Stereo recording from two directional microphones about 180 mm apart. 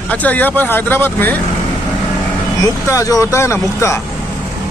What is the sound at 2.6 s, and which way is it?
Speech, 20° left (ahead or behind).